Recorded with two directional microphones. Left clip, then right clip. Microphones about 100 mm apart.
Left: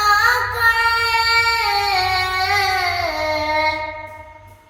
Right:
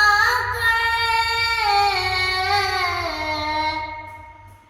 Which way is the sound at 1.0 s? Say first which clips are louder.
Left 4 dB; 35° left (ahead or behind).